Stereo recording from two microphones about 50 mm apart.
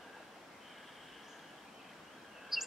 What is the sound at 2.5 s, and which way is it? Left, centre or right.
Chirp, centre.